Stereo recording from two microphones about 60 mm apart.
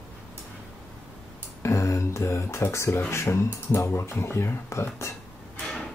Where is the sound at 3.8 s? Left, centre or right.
Left.